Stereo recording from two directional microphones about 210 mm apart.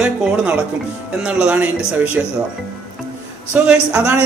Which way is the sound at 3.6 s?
5° right (ahead or behind).